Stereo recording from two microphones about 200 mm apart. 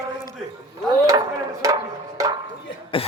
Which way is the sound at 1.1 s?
15° right (ahead or behind).